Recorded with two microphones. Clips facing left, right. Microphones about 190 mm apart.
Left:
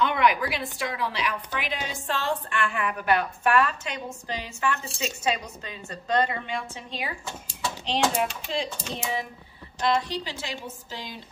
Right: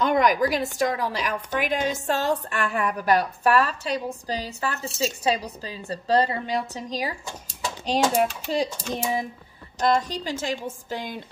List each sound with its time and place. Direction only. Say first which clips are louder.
0.0 s a woman's voice: right 3 dB; 40° right (ahead or behind)